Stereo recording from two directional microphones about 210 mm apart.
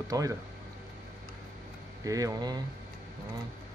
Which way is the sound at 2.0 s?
15° right (ahead or behind).